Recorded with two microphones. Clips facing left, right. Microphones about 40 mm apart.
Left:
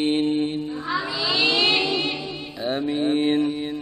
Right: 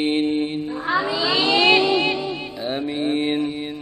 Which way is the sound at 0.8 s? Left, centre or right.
Right.